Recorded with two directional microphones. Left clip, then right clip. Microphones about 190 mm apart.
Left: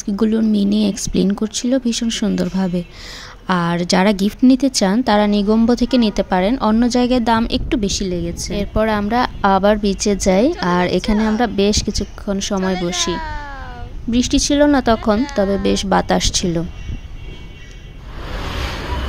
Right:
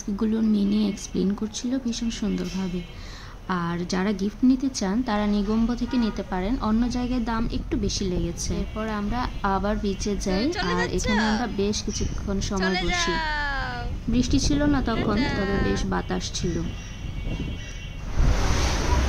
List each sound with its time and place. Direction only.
0.0 s a woman's voice: 40° left (ahead or behind)
8.1 s a woman's voice: 25° left (ahead or behind)
8.5 s a woman's voice: 45° left (ahead or behind)
11.1 s a woman's voice: centre (ahead or behind)
11.4 s a woman's voice: 45° left (ahead or behind)
13.1 s baby cry: centre (ahead or behind)
14.1 s a woman's voice: 45° left (ahead or behind)
18.2 s waves: centre (ahead or behind)